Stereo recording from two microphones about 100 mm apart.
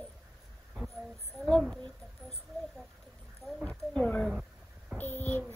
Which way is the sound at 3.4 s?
10° left (ahead or behind).